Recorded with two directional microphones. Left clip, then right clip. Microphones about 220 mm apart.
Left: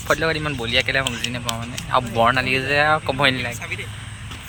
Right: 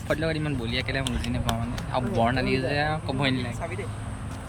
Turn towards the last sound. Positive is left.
turn(degrees=-10)  # may be behind; listen again after turning